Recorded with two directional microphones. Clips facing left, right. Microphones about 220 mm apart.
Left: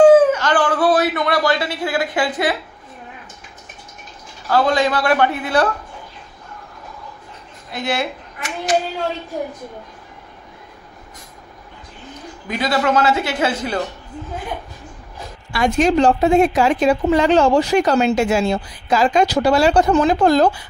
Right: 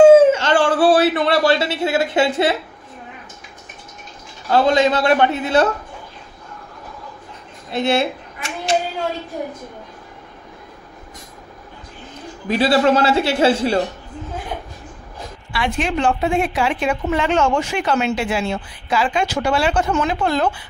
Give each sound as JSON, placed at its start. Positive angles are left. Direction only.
{"t": 0.0, "sound": "a sound", "side_deg": -25}
{"t": 4.5, "sound": "a man's voice", "side_deg": -25}
{"t": 7.7, "sound": "speech", "side_deg": -25}
{"t": 12.4, "sound": "a man's voice", "side_deg": -30}
{"t": 15.5, "sound": "a woman's voice", "side_deg": 45}